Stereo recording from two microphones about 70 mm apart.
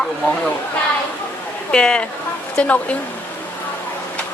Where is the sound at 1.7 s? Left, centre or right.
Centre.